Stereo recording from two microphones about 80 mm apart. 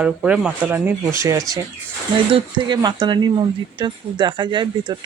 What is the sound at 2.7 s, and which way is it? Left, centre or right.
Speech, right.